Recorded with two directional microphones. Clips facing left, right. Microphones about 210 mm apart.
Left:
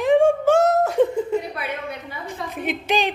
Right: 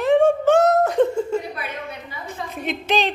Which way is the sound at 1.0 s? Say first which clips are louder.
Even; 15° left (ahead or behind).